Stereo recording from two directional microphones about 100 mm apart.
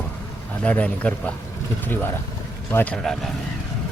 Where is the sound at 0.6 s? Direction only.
15° left (ahead or behind).